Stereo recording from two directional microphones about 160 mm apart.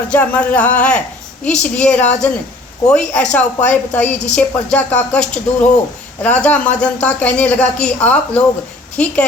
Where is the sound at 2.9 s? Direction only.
5° left (ahead or behind).